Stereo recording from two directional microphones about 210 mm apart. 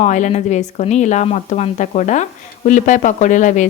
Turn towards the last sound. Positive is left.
turn(degrees=35)  # may be behind; listen again after turning